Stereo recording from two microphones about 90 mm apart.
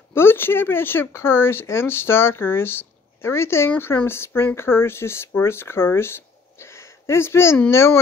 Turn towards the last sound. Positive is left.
turn(degrees=30)  # may be behind; listen again after turning